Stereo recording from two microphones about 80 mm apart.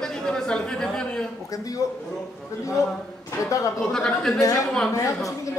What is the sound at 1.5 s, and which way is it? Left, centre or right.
Speech, left.